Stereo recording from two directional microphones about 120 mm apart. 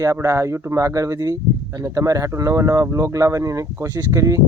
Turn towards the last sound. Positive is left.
turn(degrees=-25)  # may be behind; listen again after turning